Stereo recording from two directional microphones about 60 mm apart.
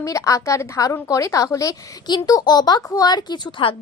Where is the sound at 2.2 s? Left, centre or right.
Left.